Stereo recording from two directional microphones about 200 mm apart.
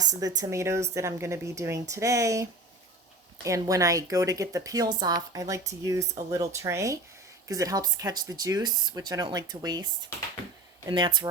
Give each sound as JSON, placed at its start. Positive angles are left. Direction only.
{"t": 0.1, "sound": "speech", "side_deg": -15}
{"t": 10.8, "sound": "speech", "side_deg": -25}